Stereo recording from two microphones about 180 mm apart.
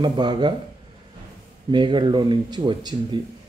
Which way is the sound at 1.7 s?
25° right (ahead or behind).